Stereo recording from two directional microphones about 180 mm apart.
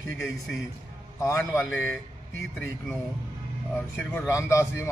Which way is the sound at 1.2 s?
15° left (ahead or behind).